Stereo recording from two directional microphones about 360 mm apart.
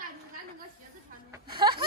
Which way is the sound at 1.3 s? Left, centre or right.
Centre.